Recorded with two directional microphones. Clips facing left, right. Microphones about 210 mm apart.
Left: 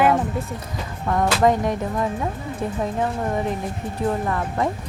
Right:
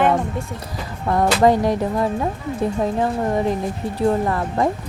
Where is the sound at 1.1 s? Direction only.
35° right (ahead or behind).